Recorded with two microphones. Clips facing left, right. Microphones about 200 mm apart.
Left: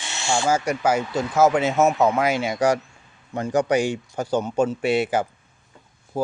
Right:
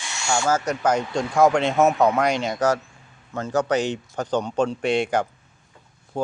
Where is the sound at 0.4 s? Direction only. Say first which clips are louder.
Left 1 dB; 10° left (ahead or behind).